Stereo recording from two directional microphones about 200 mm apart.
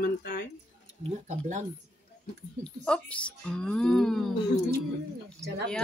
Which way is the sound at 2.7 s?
5° left (ahead or behind).